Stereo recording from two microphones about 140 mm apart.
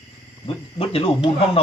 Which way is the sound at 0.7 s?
40° left (ahead or behind).